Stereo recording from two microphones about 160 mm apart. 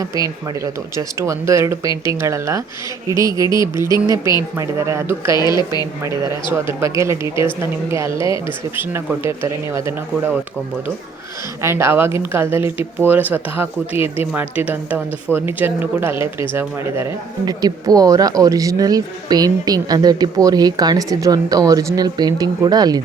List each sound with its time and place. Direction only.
0.0 s speech: 20° right (ahead or behind)
5.4 s a woman's voice: 25° left (ahead or behind)
6.7 s speech: 15° right (ahead or behind)
11.6 s speech: 15° right (ahead or behind)